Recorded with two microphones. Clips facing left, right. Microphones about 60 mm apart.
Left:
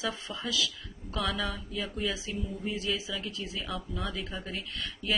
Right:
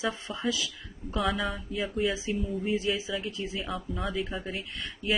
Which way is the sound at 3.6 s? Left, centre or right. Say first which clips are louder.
Right 3 dB; centre.